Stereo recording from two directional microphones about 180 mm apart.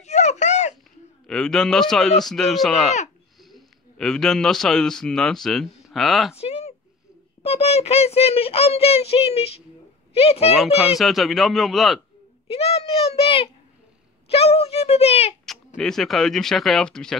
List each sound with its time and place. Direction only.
0.0 s a sound: 40° left (ahead or behind)
1.2 s a man's voice: 5° left (ahead or behind)
6.3 s a sound: 35° left (ahead or behind)
7.4 s speech: 35° left (ahead or behind)
10.8 s speech: centre (ahead or behind)
12.4 s speech: 35° left (ahead or behind)
15.4 s speech: centre (ahead or behind)